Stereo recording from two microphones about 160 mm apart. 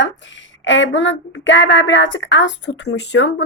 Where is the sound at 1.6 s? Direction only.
90° left.